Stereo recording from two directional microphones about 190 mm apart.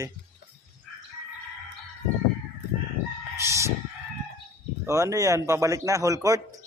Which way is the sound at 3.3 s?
15° right (ahead or behind).